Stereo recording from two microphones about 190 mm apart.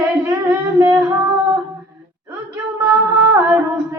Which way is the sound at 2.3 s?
15° right (ahead or behind).